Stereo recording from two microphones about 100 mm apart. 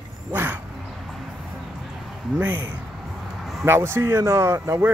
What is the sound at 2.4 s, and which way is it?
Speech, 20° right (ahead or behind).